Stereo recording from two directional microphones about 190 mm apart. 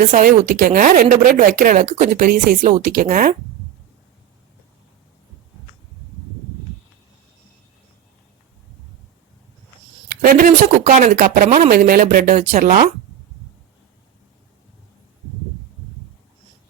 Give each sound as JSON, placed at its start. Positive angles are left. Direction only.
{"t": 0.0, "sound": "speech", "side_deg": -45}
{"t": 10.2, "sound": "speech", "side_deg": -45}